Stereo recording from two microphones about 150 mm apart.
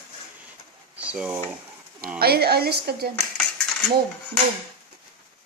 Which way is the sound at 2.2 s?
90° right.